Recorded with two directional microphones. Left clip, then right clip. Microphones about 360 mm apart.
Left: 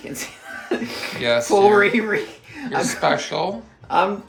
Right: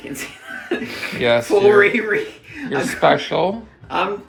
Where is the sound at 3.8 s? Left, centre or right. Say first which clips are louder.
Left 3 dB; centre.